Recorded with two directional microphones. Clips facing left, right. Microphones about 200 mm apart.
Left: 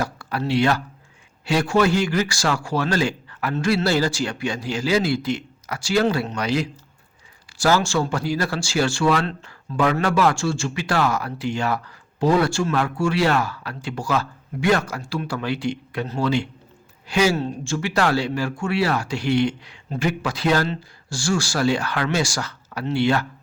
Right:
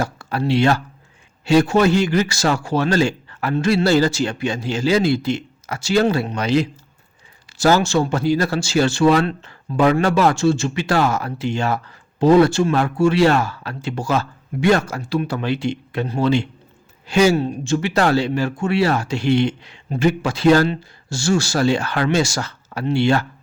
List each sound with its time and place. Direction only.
0.0 s speech: 25° right (ahead or behind)
17.3 s speech: 15° right (ahead or behind)